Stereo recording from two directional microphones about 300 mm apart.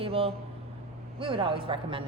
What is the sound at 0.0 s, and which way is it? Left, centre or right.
Speech, centre.